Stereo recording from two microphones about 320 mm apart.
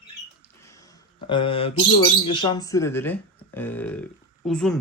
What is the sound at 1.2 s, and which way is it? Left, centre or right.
Speech, centre.